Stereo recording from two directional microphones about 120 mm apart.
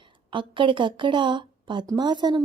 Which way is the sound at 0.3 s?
45° right (ahead or behind).